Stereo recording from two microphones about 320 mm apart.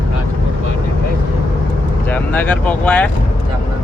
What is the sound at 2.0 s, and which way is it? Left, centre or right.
Speech, centre.